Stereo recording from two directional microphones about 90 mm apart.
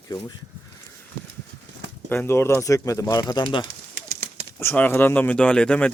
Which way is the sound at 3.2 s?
55° left (ahead or behind).